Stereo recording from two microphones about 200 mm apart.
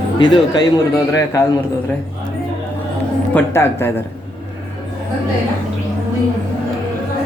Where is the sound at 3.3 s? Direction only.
10° left (ahead or behind).